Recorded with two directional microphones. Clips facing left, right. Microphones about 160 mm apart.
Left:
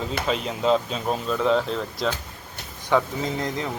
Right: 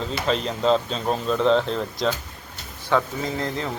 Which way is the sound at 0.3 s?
5° left (ahead or behind).